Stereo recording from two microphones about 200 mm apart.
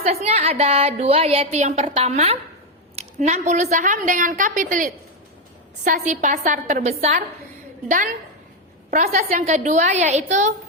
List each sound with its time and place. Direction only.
0.0 s a woman's voice: 30° right (ahead or behind)
9.4 s a woman's voice: 35° right (ahead or behind)